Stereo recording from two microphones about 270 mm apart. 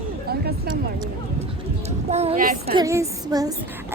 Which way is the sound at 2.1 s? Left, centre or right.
Right.